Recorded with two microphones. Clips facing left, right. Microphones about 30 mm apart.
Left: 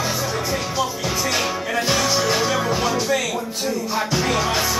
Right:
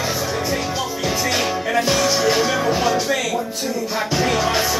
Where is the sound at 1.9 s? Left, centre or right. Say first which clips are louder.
Even; centre.